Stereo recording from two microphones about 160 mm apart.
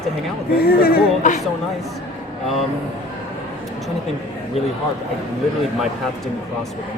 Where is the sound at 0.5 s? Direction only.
75° left (ahead or behind).